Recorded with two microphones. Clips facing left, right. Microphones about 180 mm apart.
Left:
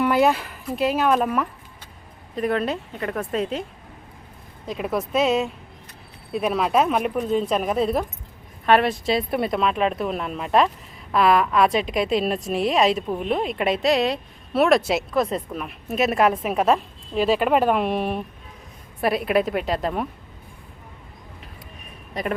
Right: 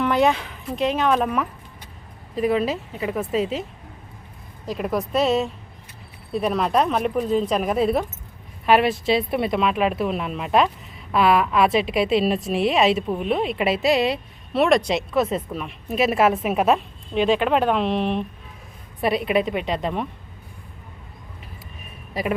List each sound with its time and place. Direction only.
0.0 s a woman's voice: 5° left (ahead or behind)
22.2 s a woman's voice: 5° right (ahead or behind)